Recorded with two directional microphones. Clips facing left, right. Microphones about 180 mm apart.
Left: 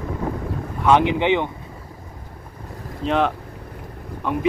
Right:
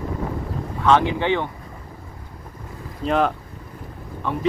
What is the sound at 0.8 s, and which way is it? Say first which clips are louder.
Speech: left 1 dB; 15° left (ahead or behind).